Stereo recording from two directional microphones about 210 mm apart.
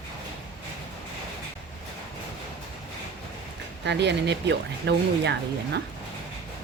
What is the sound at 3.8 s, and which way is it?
Speech, 55° right (ahead or behind).